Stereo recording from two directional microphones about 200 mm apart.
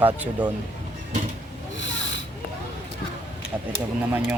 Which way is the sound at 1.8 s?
65° left (ahead or behind).